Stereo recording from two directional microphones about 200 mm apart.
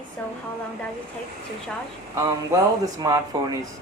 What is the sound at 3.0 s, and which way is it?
Speech, 20° right (ahead or behind).